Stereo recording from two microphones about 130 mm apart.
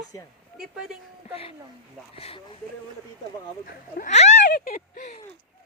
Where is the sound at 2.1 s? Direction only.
45° left (ahead or behind).